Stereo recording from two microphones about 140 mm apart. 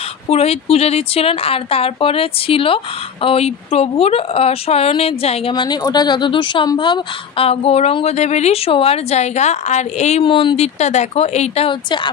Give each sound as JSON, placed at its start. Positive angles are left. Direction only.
{"t": 0.3, "sound": "speech", "side_deg": 45}
{"t": 5.5, "sound": "speech", "side_deg": 30}
{"t": 10.2, "sound": "speech", "side_deg": 40}